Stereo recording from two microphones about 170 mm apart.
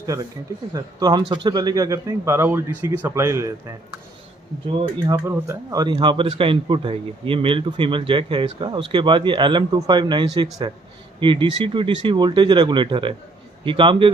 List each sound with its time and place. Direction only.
0.7 s speech: 20° right (ahead or behind)
4.7 s speech: 25° right (ahead or behind)